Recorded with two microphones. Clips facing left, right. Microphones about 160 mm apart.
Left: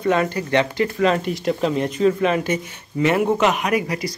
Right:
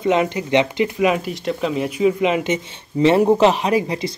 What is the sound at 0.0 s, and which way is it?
A man's voice, 20° right (ahead or behind).